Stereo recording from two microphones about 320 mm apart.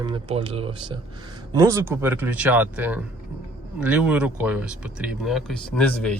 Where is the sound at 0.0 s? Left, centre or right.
Centre.